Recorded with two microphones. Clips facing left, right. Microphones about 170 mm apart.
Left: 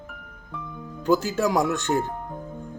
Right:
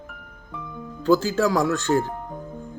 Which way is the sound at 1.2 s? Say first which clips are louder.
Right 3 dB; 90° right.